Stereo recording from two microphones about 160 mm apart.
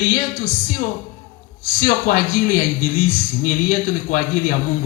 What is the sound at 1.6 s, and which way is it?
A man's voice, 60° left (ahead or behind).